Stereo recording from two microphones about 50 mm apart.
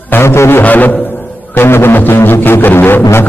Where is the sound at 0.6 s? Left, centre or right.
Left.